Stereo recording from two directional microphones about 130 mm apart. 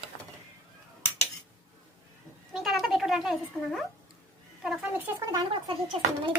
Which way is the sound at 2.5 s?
Centre (ahead or behind).